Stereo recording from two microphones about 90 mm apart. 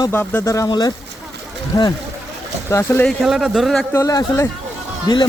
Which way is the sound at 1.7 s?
40° left (ahead or behind).